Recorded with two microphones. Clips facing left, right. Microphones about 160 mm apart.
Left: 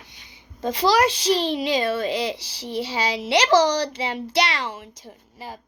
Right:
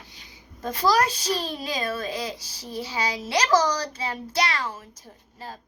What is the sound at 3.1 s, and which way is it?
Speech, 70° left (ahead or behind).